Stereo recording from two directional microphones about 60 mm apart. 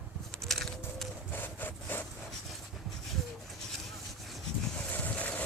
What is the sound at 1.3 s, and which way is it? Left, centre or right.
Wood, left.